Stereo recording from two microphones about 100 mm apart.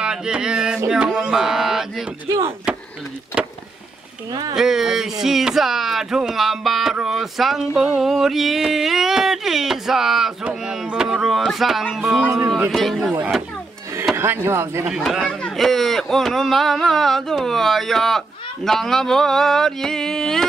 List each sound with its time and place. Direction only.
0.0 s speech: 10° right (ahead or behind)
3.4 s vehicle: 10° right (ahead or behind)
4.3 s speech: 45° right (ahead or behind)
4.6 s speech: 5° right (ahead or behind)
12.0 s a man's voice: 15° right (ahead or behind)
12.7 s speech: centre (ahead or behind)
14.1 s speech: 25° right (ahead or behind)
14.9 s speech: 5° right (ahead or behind)